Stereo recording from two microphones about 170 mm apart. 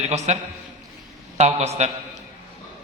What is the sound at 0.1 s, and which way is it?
Speech, 40° right (ahead or behind).